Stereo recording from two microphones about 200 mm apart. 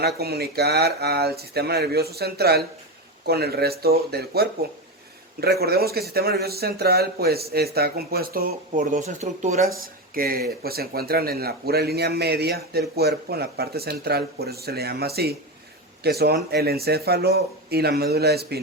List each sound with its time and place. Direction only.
0.0 s speech: 50° right (ahead or behind); by 9.6 s 35° right (ahead or behind)
9.8 s speech: 45° right (ahead or behind)